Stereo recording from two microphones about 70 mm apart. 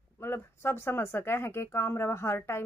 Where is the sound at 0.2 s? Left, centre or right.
Left.